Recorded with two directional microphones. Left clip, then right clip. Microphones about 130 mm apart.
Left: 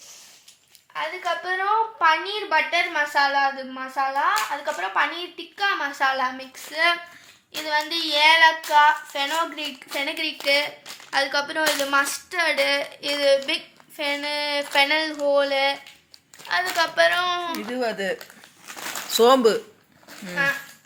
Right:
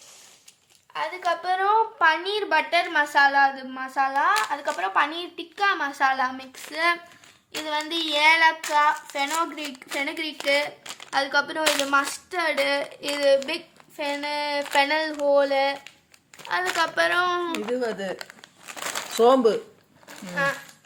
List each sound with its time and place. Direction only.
0.9 s a woman's voice: 30° right (ahead or behind)
1.6 s a woman's voice: 10° right (ahead or behind); by 13.6 s 45° right (ahead or behind)
14.0 s a sound: 45° right (ahead or behind)
16.5 s speech: 35° right (ahead or behind)
17.7 s speech: 20° left (ahead or behind)
20.4 s speech: 60° right (ahead or behind)